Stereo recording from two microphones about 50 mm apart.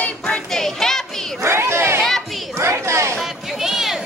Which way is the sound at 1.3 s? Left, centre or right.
Right.